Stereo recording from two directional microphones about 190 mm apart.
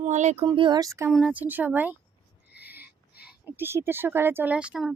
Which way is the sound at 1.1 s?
5° right (ahead or behind).